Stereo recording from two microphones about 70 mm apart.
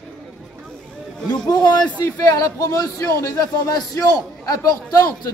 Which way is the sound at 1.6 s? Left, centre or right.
Left.